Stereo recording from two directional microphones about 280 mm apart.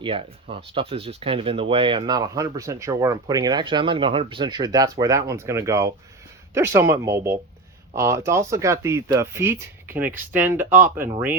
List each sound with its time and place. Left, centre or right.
0.0 s speech: centre